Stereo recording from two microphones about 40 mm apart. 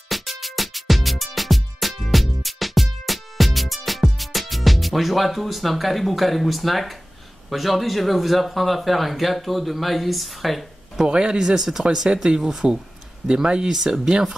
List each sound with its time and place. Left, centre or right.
0.1 s music: centre
7.4 s speech: centre
11.1 s speech: right
12.4 s speech: centre
13.3 s speech: centre